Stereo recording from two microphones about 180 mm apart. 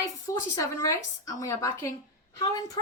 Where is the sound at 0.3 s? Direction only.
15° left (ahead or behind).